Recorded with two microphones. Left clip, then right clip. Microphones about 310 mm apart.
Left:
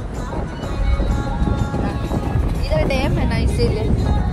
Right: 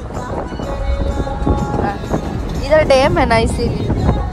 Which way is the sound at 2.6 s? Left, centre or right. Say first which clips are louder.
Right 10 dB; right.